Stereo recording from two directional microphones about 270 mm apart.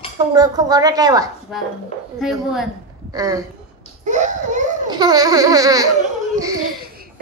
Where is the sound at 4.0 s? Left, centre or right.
Right.